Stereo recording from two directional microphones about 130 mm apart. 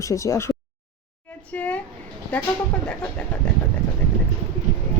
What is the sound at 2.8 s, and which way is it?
Speech, 5° left (ahead or behind).